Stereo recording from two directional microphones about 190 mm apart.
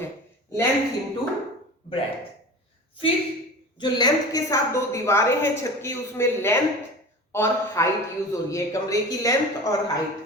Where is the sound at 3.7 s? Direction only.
25° left (ahead or behind).